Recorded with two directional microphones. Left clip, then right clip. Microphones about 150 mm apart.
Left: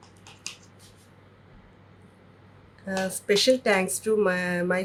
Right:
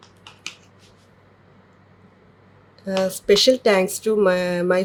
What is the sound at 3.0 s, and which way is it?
Speech, 90° right.